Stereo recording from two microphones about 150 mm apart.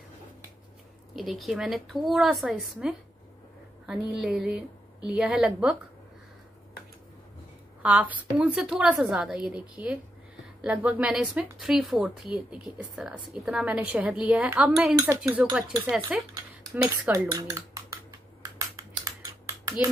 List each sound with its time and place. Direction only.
1.1 s a woman's voice: centre (ahead or behind)
7.8 s a woman's voice: 10° right (ahead or behind)
15.0 s speech: 20° right (ahead or behind)
16.1 s a woman's voice: 5° right (ahead or behind)
17.1 s dishes: 25° right (ahead or behind)
19.0 s computer keyboard: 20° right (ahead or behind)